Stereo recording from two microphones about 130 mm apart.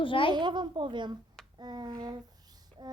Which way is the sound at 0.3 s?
35° right (ahead or behind).